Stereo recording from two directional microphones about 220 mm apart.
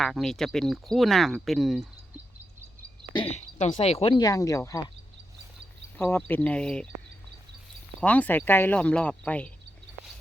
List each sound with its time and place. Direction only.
0.0 s speech: centre (ahead or behind)
3.1 s speech: 25° left (ahead or behind)
6.0 s speech: 10° left (ahead or behind)
8.0 s speech: 5° left (ahead or behind)